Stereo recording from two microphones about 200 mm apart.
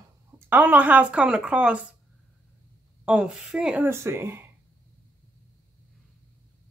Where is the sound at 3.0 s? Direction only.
5° right (ahead or behind).